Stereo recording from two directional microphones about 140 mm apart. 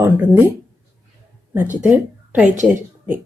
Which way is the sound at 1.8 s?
5° right (ahead or behind).